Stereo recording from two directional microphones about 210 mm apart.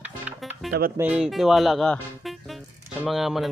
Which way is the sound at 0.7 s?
45° right (ahead or behind).